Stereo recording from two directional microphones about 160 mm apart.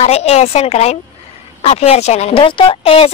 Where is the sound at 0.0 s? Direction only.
40° left (ahead or behind).